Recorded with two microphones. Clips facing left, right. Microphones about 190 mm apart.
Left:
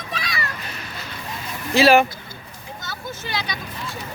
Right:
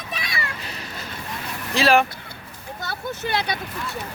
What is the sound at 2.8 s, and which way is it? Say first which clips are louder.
Vehicle: right 5 dB; 60° right (ahead or behind).